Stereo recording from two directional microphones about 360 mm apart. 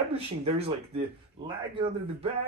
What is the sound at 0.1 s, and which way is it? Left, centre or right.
Speech, centre.